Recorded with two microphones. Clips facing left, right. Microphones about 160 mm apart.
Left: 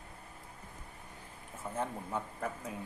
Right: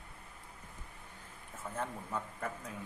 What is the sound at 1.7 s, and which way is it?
Speech, 15° left (ahead or behind).